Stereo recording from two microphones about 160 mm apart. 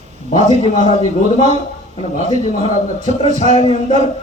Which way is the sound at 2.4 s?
50° left (ahead or behind).